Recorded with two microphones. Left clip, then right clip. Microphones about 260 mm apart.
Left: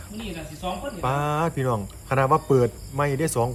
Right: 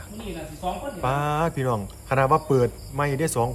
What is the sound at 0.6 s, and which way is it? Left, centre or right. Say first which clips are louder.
Cricket: right 1 dB; centre.